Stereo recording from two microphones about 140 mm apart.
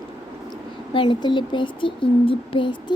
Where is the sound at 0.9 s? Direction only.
35° left (ahead or behind).